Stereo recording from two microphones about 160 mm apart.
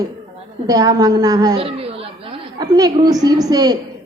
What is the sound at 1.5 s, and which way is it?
Chatter, 35° right (ahead or behind).